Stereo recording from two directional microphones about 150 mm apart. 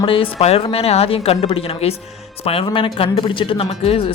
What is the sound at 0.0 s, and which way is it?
Speech, 35° left (ahead or behind).